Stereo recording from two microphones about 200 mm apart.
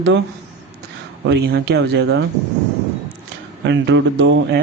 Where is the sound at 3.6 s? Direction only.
65° right (ahead or behind).